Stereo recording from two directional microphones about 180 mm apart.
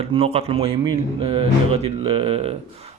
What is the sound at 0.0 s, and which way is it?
Speech, 35° right (ahead or behind).